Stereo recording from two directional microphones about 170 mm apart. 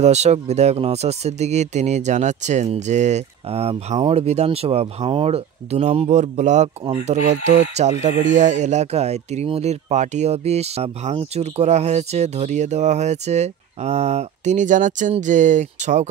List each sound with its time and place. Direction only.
0.0 s speech: 40° right (ahead or behind)